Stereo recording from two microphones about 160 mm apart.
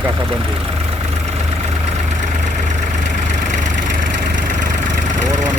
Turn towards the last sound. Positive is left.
turn(degrees=-50)  # may be behind; listen again after turning